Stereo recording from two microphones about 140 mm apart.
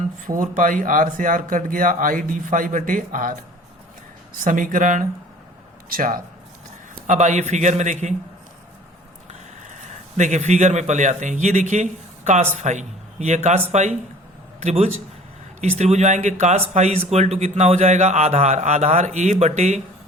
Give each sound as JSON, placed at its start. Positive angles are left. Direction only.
{"t": 0.3, "sound": "speech", "side_deg": -65}
{"t": 4.4, "sound": "speech", "side_deg": -70}
{"t": 5.9, "sound": "speech", "side_deg": -90}
{"t": 6.9, "sound": "speech", "side_deg": -60}
{"t": 9.9, "sound": "a man's voice", "side_deg": -60}